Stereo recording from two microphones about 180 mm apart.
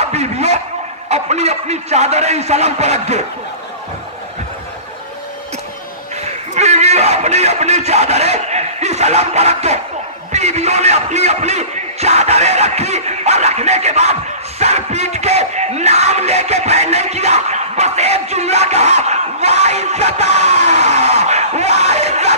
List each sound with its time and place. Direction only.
0.0 s a sound: 35° right (ahead or behind)
1.0 s music: 40° right (ahead or behind)
6.5 s a man's voice: 40° right (ahead or behind)
8.5 s music: 40° right (ahead or behind)
10.3 s speech: 40° right (ahead or behind)
14.6 s music: 35° right (ahead or behind)
18.9 s speech: 40° right (ahead or behind)
20.2 s a sound: 70° left (ahead or behind)
20.6 s a sound: 35° right (ahead or behind)